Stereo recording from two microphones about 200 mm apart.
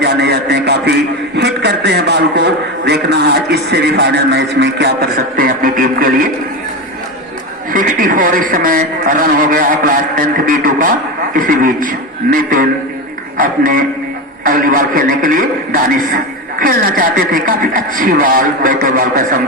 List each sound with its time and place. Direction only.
0.0 s a sound: 55° right (ahead or behind)
1.4 s a man's voice: 60° right (ahead or behind)
7.7 s speech: 45° right (ahead or behind)